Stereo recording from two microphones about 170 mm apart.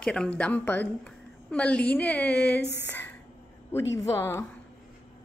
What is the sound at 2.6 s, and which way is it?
Speech, 85° left.